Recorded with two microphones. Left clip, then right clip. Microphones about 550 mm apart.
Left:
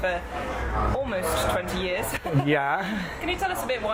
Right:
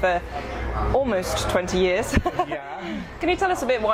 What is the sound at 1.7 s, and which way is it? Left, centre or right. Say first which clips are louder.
Speech: right 6 dB; right.